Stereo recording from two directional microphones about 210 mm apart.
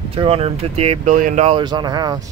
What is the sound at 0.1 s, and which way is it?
Speech, 25° right (ahead or behind).